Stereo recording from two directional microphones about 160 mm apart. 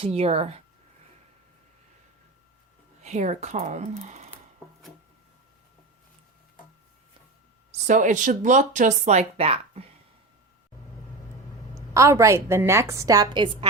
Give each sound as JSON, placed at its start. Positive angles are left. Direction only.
{"t": 0.0, "sound": "speech", "side_deg": -40}
{"t": 3.0, "sound": "speech", "side_deg": -45}
{"t": 7.7, "sound": "speech", "side_deg": -50}
{"t": 11.7, "sound": "a woman's voice", "side_deg": -20}